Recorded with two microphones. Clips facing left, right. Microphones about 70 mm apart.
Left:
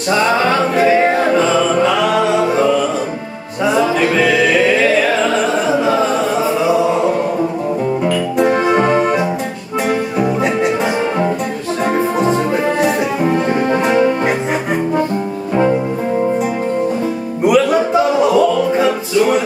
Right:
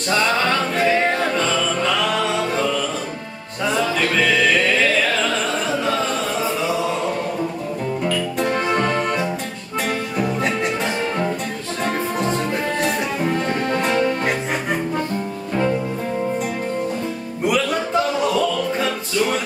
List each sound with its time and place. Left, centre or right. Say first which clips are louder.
0.1 s music: left 5 dB; centre
6.6 s chant: left 8 dB; centre
8.0 s music: left 6 dB; centre
11.8 s music: left 7 dB; centre
15.5 s music: left 6 dB; left
17.5 s music: left 8 dB; centre